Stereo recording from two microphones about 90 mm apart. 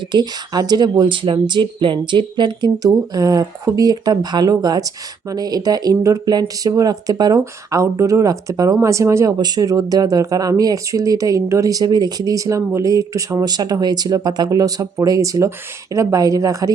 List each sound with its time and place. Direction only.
0.1 s speech: 50° right (ahead or behind)